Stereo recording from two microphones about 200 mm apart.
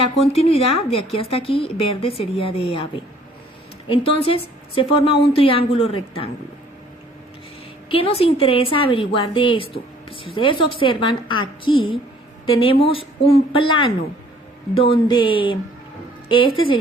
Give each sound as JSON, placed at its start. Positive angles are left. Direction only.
{"t": 0.0, "sound": "speech", "side_deg": 30}
{"t": 3.8, "sound": "speech", "side_deg": 25}
{"t": 7.9, "sound": "speech", "side_deg": 25}